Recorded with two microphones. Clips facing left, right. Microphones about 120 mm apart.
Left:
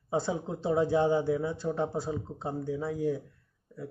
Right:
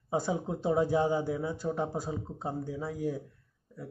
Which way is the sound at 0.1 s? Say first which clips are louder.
Even; 15° right (ahead or behind).